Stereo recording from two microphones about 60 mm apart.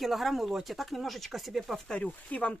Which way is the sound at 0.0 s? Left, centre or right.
Centre.